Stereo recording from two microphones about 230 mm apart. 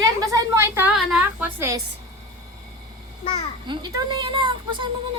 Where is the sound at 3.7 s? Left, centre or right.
Centre.